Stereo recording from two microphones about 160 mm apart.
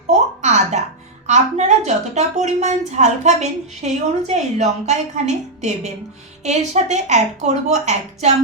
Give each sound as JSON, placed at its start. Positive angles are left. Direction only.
{"t": 0.4, "sound": "music", "side_deg": -45}
{"t": 1.3, "sound": "a woman's voice", "side_deg": -45}